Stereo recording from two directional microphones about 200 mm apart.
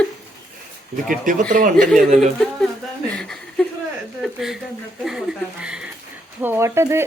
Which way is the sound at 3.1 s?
Centre (ahead or behind).